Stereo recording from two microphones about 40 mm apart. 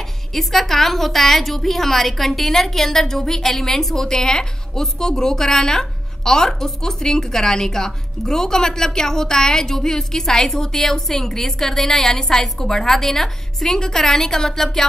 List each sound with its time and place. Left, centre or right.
0.3 s a woman's voice: centre